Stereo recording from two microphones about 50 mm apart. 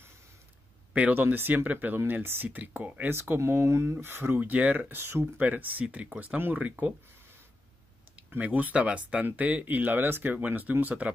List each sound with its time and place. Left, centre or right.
1.1 s speech: right
3.3 s speech: right
3.9 s speech: right
4.4 s speech: right
5.2 s speech: right
8.4 s speech: right